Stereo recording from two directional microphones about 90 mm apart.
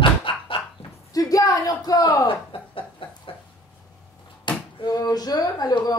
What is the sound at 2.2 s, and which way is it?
Chuckle, 75° left (ahead or behind).